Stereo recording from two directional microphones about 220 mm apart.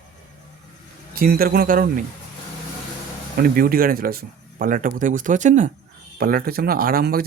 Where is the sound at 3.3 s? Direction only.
40° right (ahead or behind).